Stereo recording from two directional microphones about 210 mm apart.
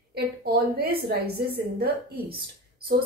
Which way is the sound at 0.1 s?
50° right (ahead or behind).